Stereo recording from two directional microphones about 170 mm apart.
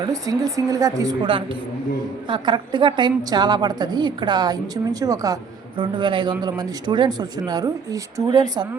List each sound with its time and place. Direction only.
0.0 s a woman's voice: 20° right (ahead or behind)